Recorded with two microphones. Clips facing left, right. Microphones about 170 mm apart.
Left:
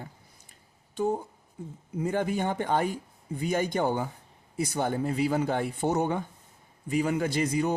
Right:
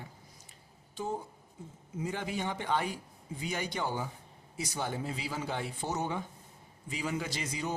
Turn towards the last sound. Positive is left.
turn(degrees=55)  # may be behind; listen again after turning